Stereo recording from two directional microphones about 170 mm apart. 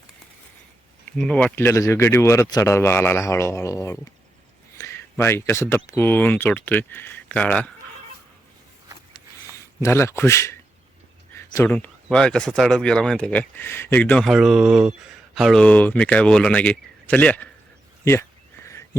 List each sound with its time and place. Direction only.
1.0 s speech: 5° left (ahead or behind)
9.6 s speech: 15° left (ahead or behind)